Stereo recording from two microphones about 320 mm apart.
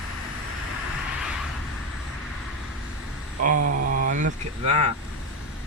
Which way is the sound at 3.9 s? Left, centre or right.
Right.